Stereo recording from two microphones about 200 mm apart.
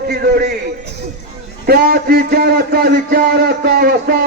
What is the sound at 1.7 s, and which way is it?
A man's voice, 50° right (ahead or behind).